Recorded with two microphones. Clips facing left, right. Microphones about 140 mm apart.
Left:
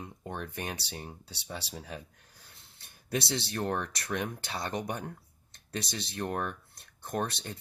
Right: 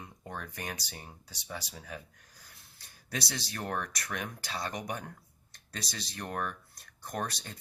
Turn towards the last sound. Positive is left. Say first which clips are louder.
# left 3 dB
turn(degrees=25)  # may be behind; listen again after turning